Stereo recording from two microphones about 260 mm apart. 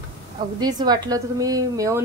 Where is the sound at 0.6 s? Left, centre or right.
Centre.